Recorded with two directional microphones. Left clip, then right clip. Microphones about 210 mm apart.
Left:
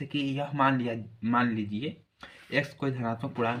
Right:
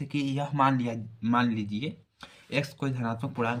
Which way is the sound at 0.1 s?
40° right (ahead or behind).